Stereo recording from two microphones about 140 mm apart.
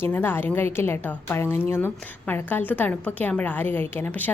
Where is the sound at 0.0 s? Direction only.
15° left (ahead or behind).